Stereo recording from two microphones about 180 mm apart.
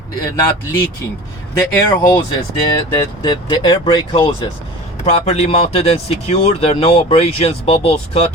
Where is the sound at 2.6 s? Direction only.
30° left (ahead or behind).